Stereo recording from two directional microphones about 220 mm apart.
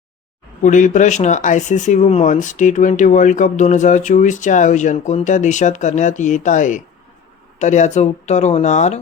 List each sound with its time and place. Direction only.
0.6 s speech: 35° left (ahead or behind)